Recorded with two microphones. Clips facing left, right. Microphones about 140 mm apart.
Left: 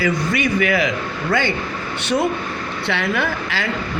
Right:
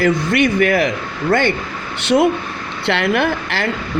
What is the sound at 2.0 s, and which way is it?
Speech, 75° right (ahead or behind).